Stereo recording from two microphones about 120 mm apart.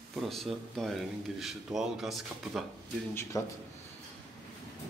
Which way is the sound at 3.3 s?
30° left (ahead or behind).